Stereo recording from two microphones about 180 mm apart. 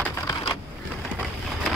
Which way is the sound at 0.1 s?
15° left (ahead or behind).